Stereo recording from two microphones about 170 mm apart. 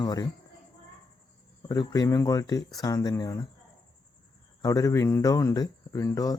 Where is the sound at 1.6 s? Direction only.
20° left (ahead or behind).